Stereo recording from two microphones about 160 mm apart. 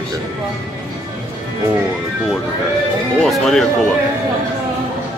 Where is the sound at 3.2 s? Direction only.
Centre (ahead or behind).